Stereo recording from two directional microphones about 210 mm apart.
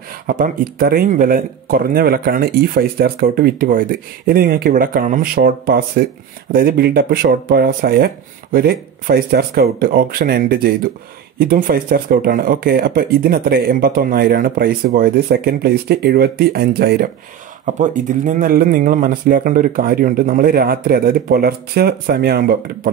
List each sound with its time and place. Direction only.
0.3 s speech: 45° right (ahead or behind)
17.6 s speech: 35° right (ahead or behind)